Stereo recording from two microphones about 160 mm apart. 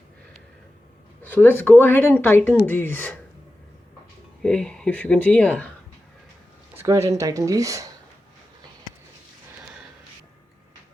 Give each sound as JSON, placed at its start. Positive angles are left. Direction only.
{"t": 1.2, "sound": "speech", "side_deg": 10}
{"t": 4.4, "sound": "speech", "side_deg": 5}
{"t": 6.7, "sound": "speech", "side_deg": -20}